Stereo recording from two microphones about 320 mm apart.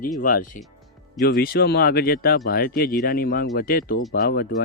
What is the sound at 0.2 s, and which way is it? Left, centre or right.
Speech, left.